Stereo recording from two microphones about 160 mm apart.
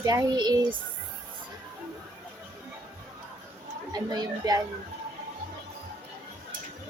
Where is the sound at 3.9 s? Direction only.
25° right (ahead or behind).